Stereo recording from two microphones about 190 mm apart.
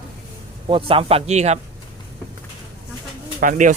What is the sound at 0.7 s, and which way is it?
Speech, 30° right (ahead or behind).